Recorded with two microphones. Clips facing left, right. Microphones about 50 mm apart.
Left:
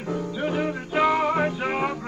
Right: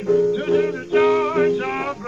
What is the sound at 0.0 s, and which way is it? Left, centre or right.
Music, centre.